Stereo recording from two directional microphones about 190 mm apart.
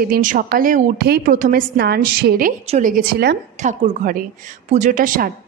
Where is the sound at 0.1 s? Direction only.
45° right (ahead or behind).